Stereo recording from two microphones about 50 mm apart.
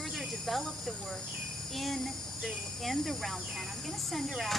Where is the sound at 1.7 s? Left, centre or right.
Centre.